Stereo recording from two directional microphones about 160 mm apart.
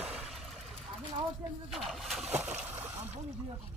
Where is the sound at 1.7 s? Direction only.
Centre (ahead or behind).